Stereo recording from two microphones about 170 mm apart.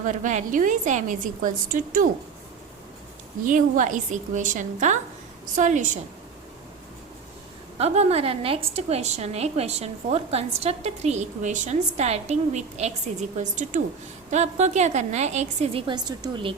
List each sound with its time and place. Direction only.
0.0 s a woman's voice: 50° right (ahead or behind)
3.4 s a woman's voice: 50° right (ahead or behind)
7.8 s a woman's voice: 40° right (ahead or behind)